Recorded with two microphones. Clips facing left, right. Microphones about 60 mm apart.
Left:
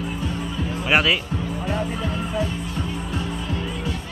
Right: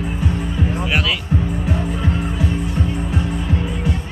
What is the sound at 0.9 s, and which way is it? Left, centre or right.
Speech, left.